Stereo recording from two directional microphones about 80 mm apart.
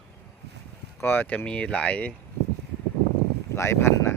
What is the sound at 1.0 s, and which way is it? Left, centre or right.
Speech, left.